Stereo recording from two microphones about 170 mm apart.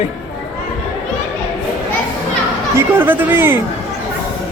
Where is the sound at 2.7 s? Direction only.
10° right (ahead or behind).